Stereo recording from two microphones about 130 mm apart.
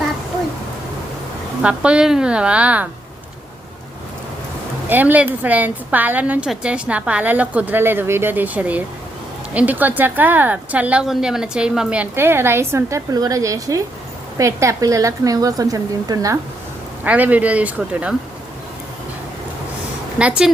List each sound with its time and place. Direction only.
1.6 s a woman's voice: 10° right (ahead or behind)
4.9 s a woman's voice: 15° right (ahead or behind)
17.0 s a woman's voice: 10° right (ahead or behind)
20.1 s a woman's voice: 5° right (ahead or behind)